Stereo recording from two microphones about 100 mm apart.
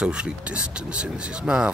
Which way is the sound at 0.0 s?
10° right (ahead or behind).